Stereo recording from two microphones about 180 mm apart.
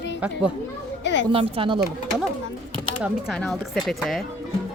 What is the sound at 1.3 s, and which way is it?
Speech, 30° right (ahead or behind).